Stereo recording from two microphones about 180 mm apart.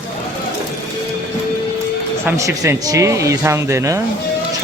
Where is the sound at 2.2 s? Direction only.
15° right (ahead or behind).